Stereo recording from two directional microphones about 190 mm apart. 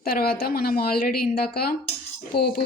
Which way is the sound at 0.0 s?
50° left (ahead or behind).